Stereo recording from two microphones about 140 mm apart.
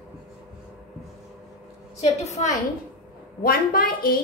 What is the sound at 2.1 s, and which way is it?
Speech, 55° left (ahead or behind).